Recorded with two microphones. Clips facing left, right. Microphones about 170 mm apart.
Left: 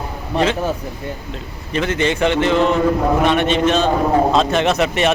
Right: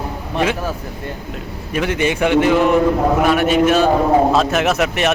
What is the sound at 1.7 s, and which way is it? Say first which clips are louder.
A man's voice: even; 10° right (ahead or behind).